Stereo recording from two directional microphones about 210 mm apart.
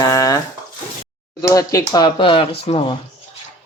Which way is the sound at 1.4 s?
15° left (ahead or behind).